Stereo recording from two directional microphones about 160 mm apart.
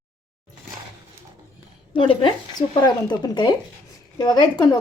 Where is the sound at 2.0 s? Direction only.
30° left (ahead or behind).